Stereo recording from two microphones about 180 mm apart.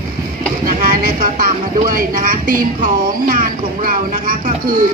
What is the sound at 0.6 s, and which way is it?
Speech, 50° right (ahead or behind).